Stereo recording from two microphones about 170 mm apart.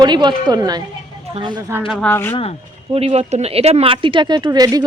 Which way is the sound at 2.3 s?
35° left (ahead or behind).